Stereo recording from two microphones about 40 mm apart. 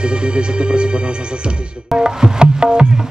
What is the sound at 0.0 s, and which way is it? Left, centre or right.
Music, right.